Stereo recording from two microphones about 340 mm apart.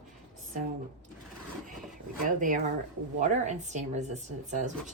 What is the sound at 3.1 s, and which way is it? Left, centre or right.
Speech, right.